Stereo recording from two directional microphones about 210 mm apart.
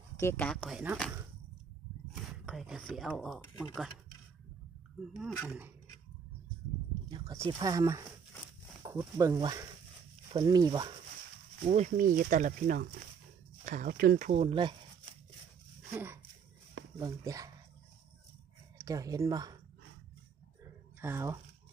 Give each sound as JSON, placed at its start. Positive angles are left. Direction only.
{"t": 0.2, "sound": "speech", "side_deg": 10}
{"t": 2.4, "sound": "speech", "side_deg": 0}
{"t": 5.1, "sound": "speech", "side_deg": -5}
{"t": 7.1, "sound": "a sound", "side_deg": -20}
{"t": 7.5, "sound": "speech", "side_deg": -15}
{"t": 11.6, "sound": "speech", "side_deg": -35}
{"t": 15.9, "sound": "speech", "side_deg": -10}
{"t": 18.8, "sound": "speech", "side_deg": -15}
{"t": 21.0, "sound": "speech", "side_deg": -10}